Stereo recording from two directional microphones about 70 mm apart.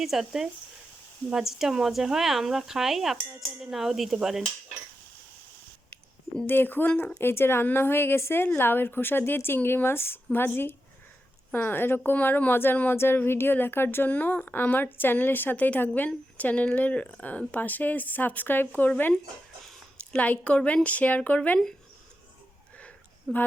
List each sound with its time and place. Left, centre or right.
0.0 s speech: centre
6.4 s a woman's voice: left
13.0 s a woman's voice: left
20.1 s a woman's voice: left
23.3 s speech: centre